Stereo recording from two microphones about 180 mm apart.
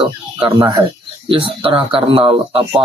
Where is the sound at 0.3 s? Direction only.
25° right (ahead or behind).